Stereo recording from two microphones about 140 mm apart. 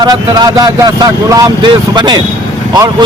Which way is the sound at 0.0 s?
30° right (ahead or behind).